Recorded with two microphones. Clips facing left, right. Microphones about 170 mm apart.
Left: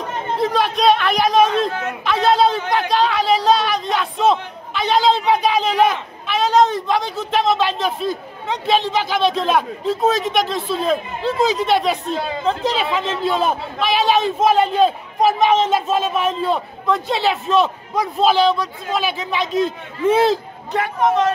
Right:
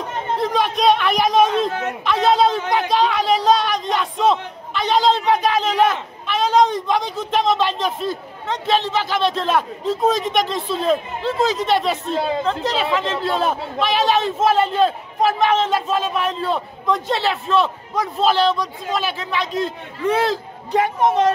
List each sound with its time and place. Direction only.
0.4 s a man's voice: 5° left (ahead or behind); by 20.3 s 25° left (ahead or behind)
20.7 s a woman's voice: 20° right (ahead or behind)